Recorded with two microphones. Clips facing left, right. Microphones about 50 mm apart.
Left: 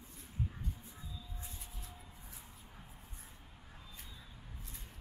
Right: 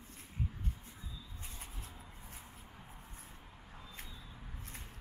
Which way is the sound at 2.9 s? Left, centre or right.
Right.